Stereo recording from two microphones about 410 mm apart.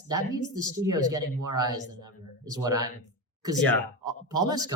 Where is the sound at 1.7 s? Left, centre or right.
Right.